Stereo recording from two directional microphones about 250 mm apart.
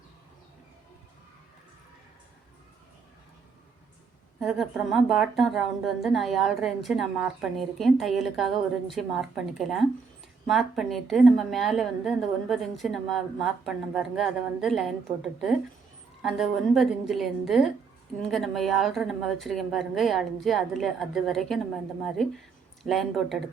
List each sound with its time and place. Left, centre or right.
4.4 s speech: centre